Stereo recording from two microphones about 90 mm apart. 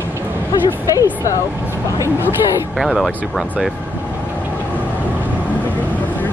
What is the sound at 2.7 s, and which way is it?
Speech, centre (ahead or behind).